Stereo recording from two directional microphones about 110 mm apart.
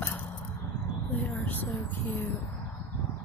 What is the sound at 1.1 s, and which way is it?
Speech, 15° left (ahead or behind).